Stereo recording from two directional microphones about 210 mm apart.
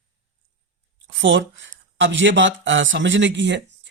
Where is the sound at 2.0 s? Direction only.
60° right (ahead or behind).